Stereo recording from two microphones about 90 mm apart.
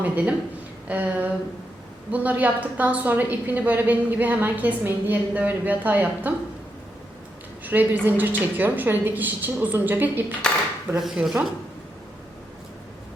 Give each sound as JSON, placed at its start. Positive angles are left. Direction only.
{"t": 0.0, "sound": "a woman's voice", "side_deg": -15}
{"t": 7.6, "sound": "a woman's voice", "side_deg": -20}
{"t": 10.9, "sound": "speech", "side_deg": -5}